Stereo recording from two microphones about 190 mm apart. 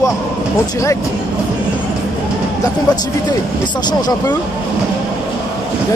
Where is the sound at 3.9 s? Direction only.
20° left (ahead or behind).